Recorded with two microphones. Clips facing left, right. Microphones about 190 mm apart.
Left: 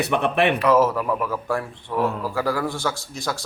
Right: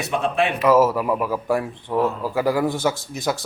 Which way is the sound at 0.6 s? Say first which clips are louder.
Right 2 dB; 10° right (ahead or behind).